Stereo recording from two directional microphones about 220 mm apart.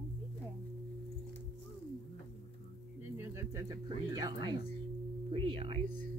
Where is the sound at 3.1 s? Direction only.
10° right (ahead or behind).